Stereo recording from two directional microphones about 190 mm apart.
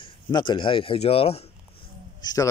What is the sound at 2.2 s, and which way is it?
Speech, 20° left (ahead or behind).